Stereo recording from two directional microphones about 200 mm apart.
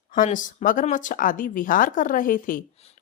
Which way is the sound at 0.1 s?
40° left (ahead or behind).